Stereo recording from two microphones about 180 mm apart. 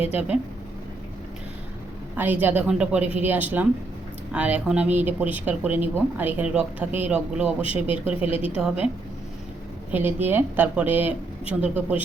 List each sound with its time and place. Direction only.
2.1 s speech: 10° right (ahead or behind)
8.3 s a woman's voice: 30° left (ahead or behind)
8.5 s speech: 5° right (ahead or behind)
9.9 s speech: 10° right (ahead or behind)